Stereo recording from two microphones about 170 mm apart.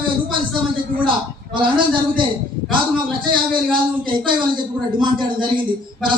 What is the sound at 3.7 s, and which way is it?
Speech, 30° right (ahead or behind).